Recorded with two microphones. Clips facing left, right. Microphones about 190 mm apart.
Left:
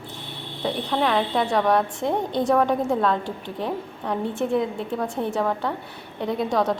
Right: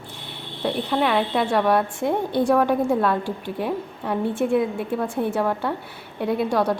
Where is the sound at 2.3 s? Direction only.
20° left (ahead or behind).